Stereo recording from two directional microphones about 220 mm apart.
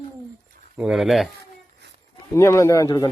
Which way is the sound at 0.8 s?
Centre (ahead or behind).